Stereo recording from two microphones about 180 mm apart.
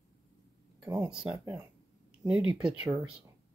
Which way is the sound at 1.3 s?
20° right (ahead or behind).